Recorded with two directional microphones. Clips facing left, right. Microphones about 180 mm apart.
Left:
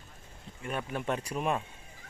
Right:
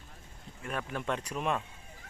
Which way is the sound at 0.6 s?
5° left (ahead or behind).